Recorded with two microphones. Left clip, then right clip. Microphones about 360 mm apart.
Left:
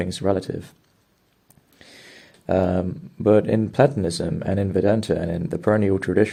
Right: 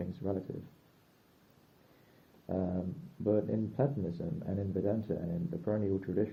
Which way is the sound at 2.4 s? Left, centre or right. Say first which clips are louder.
Left 16 dB; left.